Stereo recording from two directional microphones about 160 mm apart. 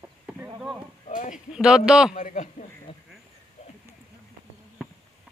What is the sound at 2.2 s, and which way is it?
Speech, 50° left (ahead or behind).